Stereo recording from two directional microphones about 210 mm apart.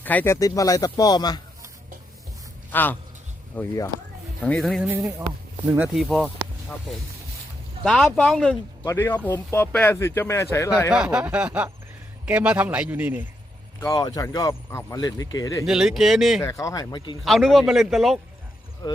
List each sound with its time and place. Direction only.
0.0 s speech: 10° left (ahead or behind)
2.7 s speech: 10° left (ahead or behind)
4.4 s a man's voice: 5° left (ahead or behind)
7.9 s a man's voice: 5° left (ahead or behind)
8.8 s speech: 15° left (ahead or behind)
10.9 s a man's voice: 5° right (ahead or behind)
13.7 s speech: 15° left (ahead or behind)
15.6 s a man's voice: centre (ahead or behind)
16.4 s speech: 15° left (ahead or behind)
17.2 s a man's voice: centre (ahead or behind)